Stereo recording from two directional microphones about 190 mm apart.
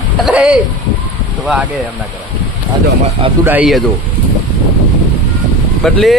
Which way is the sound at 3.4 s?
5° right (ahead or behind).